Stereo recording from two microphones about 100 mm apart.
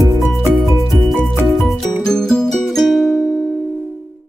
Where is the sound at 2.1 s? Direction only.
5° left (ahead or behind).